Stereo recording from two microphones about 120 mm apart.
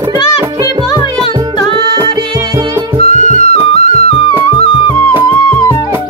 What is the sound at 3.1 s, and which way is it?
Music, 65° left (ahead or behind).